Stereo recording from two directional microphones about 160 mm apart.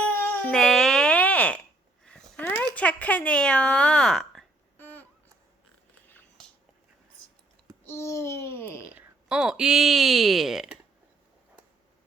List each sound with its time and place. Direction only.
0.1 s baby cry: 10° left (ahead or behind)
2.0 s a sound: 5° left (ahead or behind)
2.7 s speech: 10° left (ahead or behind)
4.8 s babbling: 10° left (ahead or behind)
6.1 s biting: 5° left (ahead or behind)
7.9 s babbling: 15° left (ahead or behind)
8.8 s speech: 10° right (ahead or behind)